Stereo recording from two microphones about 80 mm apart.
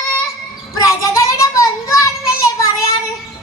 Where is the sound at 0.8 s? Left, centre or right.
Left.